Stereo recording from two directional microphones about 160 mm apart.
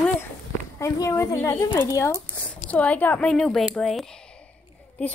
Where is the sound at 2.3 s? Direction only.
5° left (ahead or behind).